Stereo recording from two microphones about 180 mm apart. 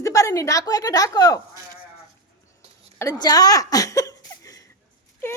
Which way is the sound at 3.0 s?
20° left (ahead or behind).